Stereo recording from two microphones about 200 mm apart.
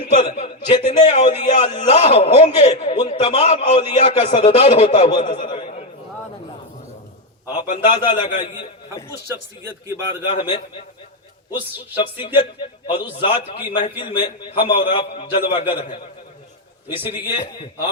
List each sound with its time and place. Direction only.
0.0 s a man's voice: 30° left (ahead or behind)
7.9 s a man's voice: 25° left (ahead or behind)
9.3 s speech: 15° right (ahead or behind)
10.2 s a man's voice: 25° left (ahead or behind)
11.9 s a man's voice: 25° left (ahead or behind)
17.3 s a man's voice: 25° left (ahead or behind)